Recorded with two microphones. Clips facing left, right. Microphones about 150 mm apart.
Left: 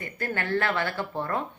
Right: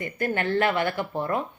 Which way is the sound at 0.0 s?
20° right (ahead or behind).